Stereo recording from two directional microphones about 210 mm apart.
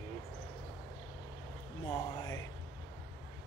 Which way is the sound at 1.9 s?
15° left (ahead or behind).